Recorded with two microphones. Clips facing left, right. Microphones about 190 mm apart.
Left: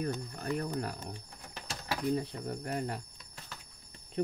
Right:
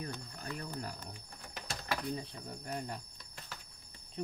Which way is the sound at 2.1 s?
65° left (ahead or behind).